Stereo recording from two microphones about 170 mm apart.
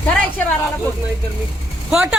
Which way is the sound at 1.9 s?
5° right (ahead or behind).